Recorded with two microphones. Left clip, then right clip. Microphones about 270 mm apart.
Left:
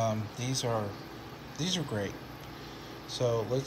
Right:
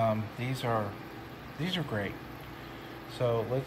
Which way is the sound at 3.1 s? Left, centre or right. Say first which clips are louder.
Even; centre.